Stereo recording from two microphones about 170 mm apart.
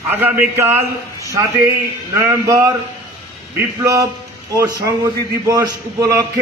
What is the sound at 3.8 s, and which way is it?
A man's voice, 20° right (ahead or behind).